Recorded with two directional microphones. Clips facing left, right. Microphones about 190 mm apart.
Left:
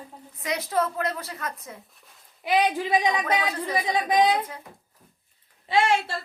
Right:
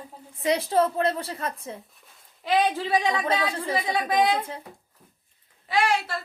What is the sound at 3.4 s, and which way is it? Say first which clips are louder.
Speech: even; 25° right (ahead or behind).